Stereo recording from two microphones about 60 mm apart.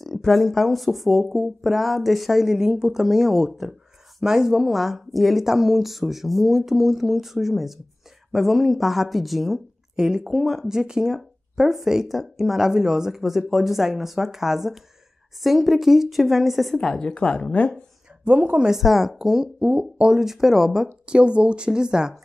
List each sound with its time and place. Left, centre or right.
0.0 s speech: centre
16.7 s speech: centre
18.2 s speech: right
18.7 s speech: centre
19.6 s speech: centre
20.2 s speech: centre